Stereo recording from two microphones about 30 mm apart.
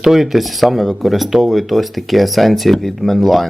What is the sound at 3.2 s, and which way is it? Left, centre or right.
Speech, centre.